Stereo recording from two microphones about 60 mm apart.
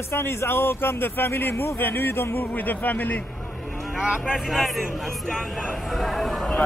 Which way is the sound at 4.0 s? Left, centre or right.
Centre.